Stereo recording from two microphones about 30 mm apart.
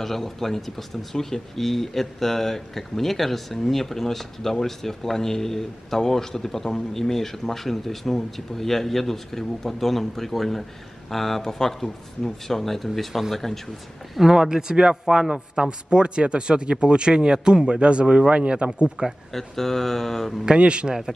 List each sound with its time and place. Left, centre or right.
0.0 s speech: centre
14.3 s speech: right
18.6 s speech: right
19.0 s speech: right
19.3 s speech: centre
20.5 s speech: right